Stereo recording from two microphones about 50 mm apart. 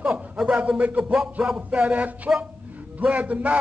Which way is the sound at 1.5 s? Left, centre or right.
Right.